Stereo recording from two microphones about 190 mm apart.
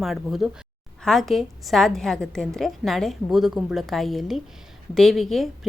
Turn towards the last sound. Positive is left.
turn(degrees=0)  # may be behind; listen again after turning